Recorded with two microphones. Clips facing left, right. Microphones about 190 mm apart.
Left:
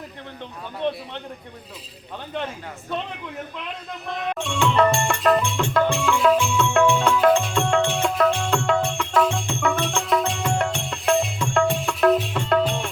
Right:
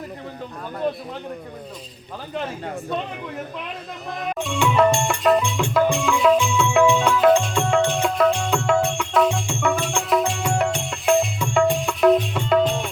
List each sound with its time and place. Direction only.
4.3 s music: centre (ahead or behind)